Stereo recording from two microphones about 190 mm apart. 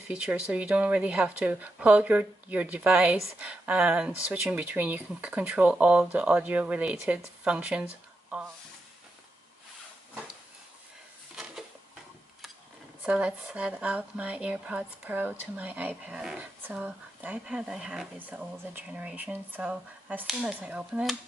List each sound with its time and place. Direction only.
0.1 s a woman's voice: 5° right (ahead or behind)
13.0 s a woman's voice: 5° right (ahead or behind)